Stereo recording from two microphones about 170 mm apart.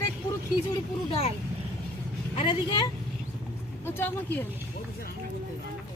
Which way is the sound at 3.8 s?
15° left (ahead or behind).